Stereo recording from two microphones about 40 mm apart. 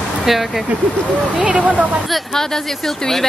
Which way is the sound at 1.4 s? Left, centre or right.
Right.